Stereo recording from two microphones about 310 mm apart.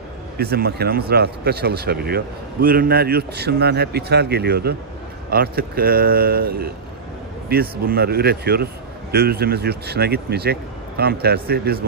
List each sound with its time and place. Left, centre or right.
0.4 s a man's voice: right